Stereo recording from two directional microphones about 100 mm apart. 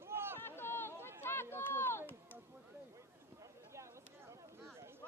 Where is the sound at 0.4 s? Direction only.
20° left (ahead or behind).